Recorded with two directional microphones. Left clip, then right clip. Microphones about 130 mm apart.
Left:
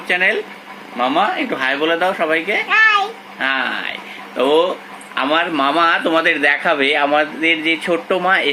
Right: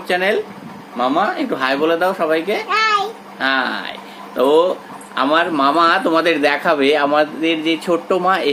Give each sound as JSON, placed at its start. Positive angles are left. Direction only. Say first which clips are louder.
{"t": 0.1, "sound": "speech", "louder": "left 1 dB", "side_deg": 0}
{"t": 1.4, "sound": "speech", "louder": "even", "side_deg": -5}
{"t": 2.6, "sound": "a sound", "louder": "left 4 dB", "side_deg": -25}
{"t": 3.4, "sound": "speech", "louder": "right 1 dB", "side_deg": 0}